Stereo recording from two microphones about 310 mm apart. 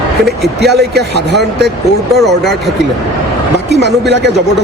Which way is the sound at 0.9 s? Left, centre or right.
Right.